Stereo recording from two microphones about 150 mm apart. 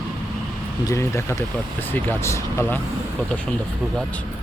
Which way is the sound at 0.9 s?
20° left (ahead or behind).